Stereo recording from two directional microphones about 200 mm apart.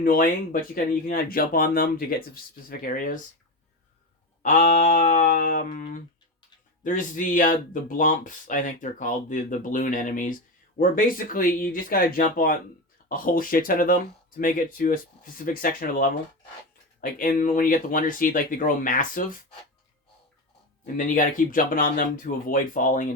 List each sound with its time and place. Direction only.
0.0 s speech: 45° left (ahead or behind)
4.4 s speech: 40° left (ahead or behind)
20.8 s speech: 40° left (ahead or behind)